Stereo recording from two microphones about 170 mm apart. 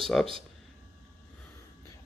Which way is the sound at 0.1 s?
5° left (ahead or behind).